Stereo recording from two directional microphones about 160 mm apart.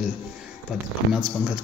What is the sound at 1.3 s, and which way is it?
Speech, 5° right (ahead or behind).